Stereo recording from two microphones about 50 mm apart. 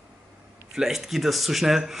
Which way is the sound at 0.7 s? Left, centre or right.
Centre.